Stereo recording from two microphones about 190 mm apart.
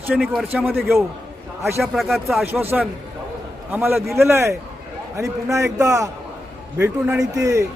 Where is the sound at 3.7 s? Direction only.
10° right (ahead or behind).